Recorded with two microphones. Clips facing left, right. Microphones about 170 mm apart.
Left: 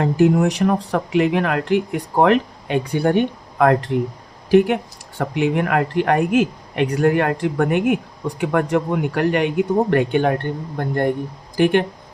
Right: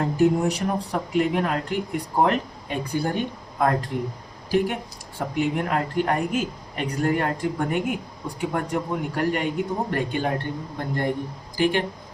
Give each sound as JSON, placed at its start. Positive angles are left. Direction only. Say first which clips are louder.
{"t": 0.0, "sound": "speech", "louder": "left 4 dB", "side_deg": 90}
{"t": 8.4, "sound": "speech", "louder": "left 7 dB", "side_deg": 90}